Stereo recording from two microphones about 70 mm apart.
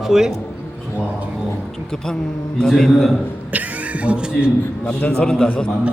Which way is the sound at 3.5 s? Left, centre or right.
Right.